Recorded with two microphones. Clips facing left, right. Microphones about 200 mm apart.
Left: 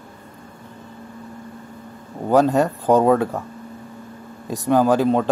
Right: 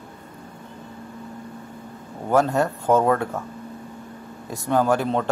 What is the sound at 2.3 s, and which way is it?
Speech, 15° left (ahead or behind).